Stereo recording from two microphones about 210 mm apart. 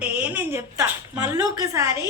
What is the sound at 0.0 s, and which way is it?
A woman's voice, 5° right (ahead or behind).